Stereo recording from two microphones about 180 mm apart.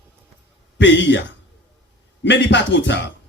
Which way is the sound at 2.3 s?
80° left.